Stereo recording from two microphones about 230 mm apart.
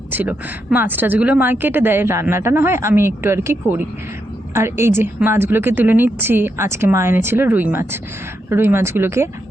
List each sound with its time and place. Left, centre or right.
0.1 s a woman's voice: centre